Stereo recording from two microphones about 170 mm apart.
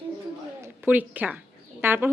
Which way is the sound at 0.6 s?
10° right (ahead or behind).